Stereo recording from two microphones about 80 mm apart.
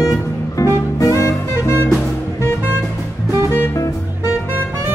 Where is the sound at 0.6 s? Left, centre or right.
Left.